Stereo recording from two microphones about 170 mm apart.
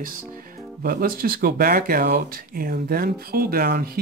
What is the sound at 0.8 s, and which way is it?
Speech, 60° right (ahead or behind).